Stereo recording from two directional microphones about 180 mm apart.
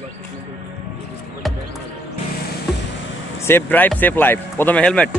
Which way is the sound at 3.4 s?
10° left (ahead or behind).